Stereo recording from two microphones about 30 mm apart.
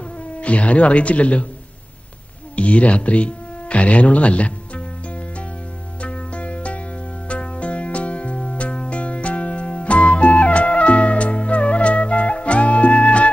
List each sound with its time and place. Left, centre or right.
0.4 s speech: left
2.5 s speech: left
6.0 s music: left